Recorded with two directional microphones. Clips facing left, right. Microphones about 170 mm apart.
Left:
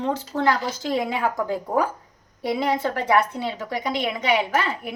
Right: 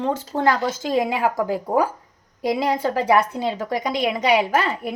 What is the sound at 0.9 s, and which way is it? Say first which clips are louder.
Speech: right 2 dB; 15° right (ahead or behind).